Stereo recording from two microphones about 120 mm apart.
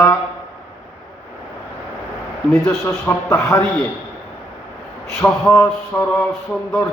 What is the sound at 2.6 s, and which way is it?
Speech, 20° left (ahead or behind).